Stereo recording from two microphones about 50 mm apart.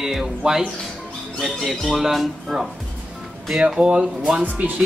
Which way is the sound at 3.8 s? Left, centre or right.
Right.